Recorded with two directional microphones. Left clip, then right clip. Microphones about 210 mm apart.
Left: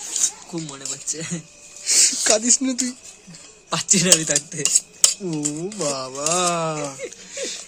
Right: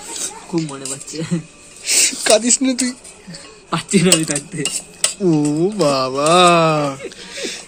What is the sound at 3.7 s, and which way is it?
Speech, 55° left (ahead or behind).